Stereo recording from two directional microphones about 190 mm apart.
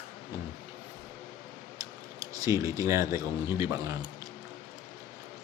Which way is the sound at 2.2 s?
20° right (ahead or behind).